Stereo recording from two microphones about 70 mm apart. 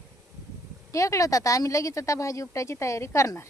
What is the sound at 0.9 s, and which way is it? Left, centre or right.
Speech, left.